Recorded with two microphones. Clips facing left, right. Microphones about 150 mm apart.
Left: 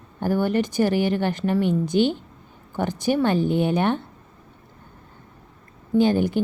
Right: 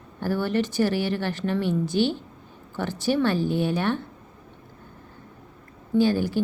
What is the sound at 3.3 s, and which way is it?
Speech, 55° left (ahead or behind).